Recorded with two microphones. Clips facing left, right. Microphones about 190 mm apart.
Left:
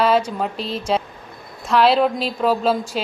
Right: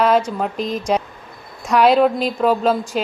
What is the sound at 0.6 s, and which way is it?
Speech, 35° left (ahead or behind).